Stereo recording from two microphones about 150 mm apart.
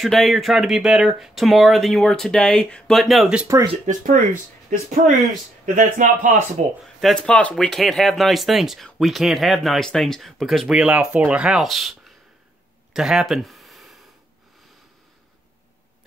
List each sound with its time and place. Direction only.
0.0 s speech: centre (ahead or behind)
3.8 s speech: 55° right (ahead or behind)
7.0 s speech: 5° left (ahead or behind)
12.9 s a sound: 5° right (ahead or behind)